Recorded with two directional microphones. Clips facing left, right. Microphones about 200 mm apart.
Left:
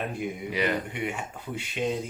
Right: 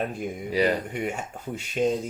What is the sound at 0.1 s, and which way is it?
Speech, 40° right (ahead or behind).